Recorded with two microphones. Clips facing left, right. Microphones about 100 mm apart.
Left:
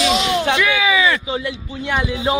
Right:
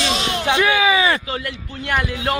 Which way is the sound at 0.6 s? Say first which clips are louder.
Right 1 dB; 40° right (ahead or behind).